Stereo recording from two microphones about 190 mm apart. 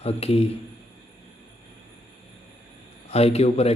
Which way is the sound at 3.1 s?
35° left (ahead or behind).